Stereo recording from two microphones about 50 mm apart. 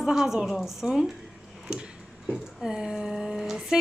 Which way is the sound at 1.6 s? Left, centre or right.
Centre.